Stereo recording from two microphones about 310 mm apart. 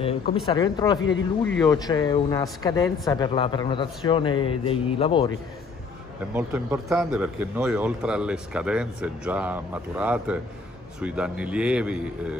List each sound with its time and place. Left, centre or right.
0.5 s speech: centre
6.3 s speech: centre